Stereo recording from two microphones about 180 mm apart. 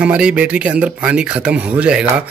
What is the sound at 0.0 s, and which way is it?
Speech, 5° right (ahead or behind).